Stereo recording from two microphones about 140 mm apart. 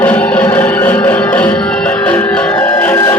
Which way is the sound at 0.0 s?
10° left (ahead or behind).